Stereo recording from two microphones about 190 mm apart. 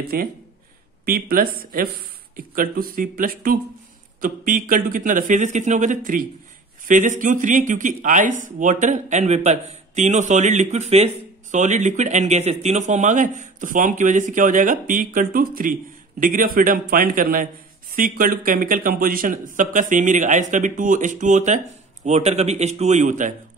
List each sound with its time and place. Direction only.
0.1 s a man's voice: 50° right (ahead or behind)